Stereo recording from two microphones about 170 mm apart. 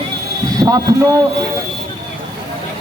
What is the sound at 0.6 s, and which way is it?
Speech, 20° right (ahead or behind).